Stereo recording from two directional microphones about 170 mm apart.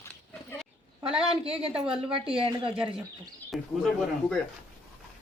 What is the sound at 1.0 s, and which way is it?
A woman's voice, 35° right (ahead or behind).